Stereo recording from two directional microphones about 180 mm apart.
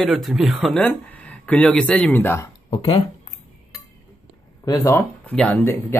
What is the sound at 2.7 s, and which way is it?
Speech, 30° left (ahead or behind).